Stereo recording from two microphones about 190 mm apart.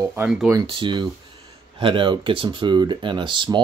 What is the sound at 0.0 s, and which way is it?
Speech, 10° right (ahead or behind).